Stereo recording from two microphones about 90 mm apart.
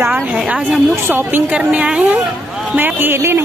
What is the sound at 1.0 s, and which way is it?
A woman's voice, 25° right (ahead or behind).